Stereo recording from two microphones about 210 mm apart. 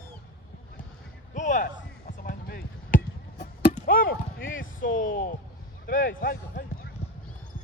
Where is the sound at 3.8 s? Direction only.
40° left (ahead or behind).